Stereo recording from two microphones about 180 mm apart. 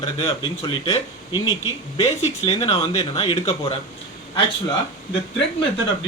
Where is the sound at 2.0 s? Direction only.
35° left (ahead or behind).